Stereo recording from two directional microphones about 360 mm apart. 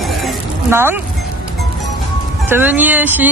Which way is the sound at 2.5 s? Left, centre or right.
Centre.